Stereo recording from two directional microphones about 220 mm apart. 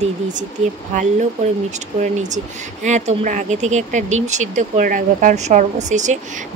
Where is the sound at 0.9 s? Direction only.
35° right (ahead or behind).